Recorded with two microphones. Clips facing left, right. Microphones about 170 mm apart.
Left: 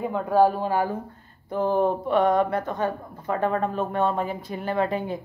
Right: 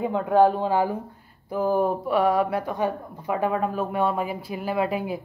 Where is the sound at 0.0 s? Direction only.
20° right (ahead or behind).